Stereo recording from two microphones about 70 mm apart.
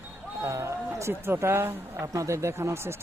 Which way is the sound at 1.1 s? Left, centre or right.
Right.